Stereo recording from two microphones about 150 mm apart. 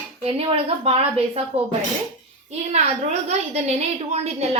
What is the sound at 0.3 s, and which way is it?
A woman's voice, 40° right (ahead or behind).